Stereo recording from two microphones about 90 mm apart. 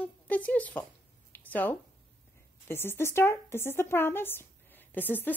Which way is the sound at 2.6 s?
25° left (ahead or behind).